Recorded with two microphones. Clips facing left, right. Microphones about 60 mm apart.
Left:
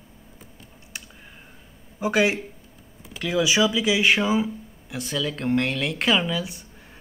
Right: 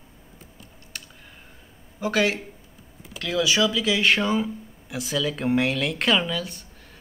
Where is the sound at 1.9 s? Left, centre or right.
Centre.